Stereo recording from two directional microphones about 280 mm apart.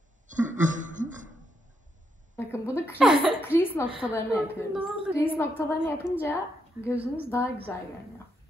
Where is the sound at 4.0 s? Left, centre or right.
Centre.